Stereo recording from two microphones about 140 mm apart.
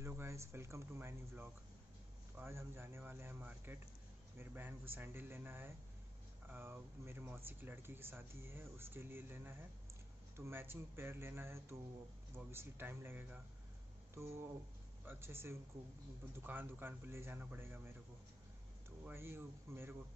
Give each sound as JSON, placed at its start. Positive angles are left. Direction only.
{"t": 0.0, "sound": "speech", "side_deg": -20}